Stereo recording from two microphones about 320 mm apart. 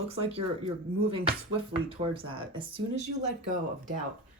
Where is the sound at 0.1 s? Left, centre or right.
Centre.